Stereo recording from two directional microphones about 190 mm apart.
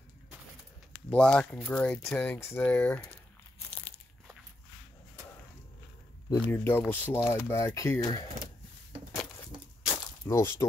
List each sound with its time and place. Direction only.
1.1 s speech: 5° left (ahead or behind)
6.3 s speech: 10° left (ahead or behind)
9.4 s a sound: 15° left (ahead or behind)